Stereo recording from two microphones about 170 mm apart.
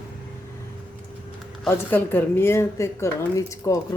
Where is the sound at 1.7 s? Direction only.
10° left (ahead or behind).